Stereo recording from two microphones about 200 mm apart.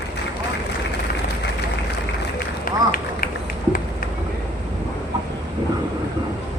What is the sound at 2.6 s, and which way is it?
Run, 45° left (ahead or behind).